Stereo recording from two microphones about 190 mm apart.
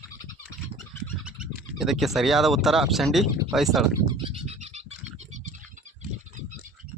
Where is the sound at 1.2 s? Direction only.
5° right (ahead or behind).